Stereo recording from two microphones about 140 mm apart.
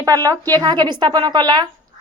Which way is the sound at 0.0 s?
25° right (ahead or behind).